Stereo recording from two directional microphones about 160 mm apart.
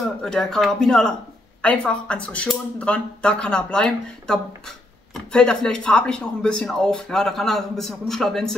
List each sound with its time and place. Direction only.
0.2 s speech: 5° left (ahead or behind)